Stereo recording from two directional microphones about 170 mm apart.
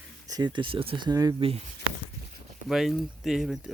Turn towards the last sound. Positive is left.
turn(degrees=0)  # may be behind; listen again after turning